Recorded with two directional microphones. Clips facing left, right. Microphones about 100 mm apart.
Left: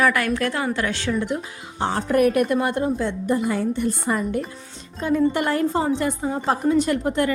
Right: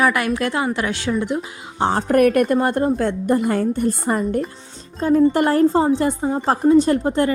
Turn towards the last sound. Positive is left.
turn(degrees=-30)  # may be behind; listen again after turning